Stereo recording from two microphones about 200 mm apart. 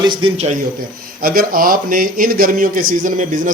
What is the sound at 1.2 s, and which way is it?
A man's voice, 45° right (ahead or behind).